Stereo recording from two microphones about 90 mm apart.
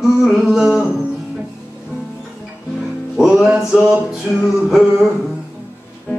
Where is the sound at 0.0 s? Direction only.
5° right (ahead or behind).